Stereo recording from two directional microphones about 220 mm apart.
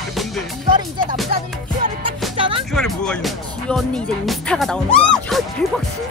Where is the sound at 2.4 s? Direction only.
25° right (ahead or behind).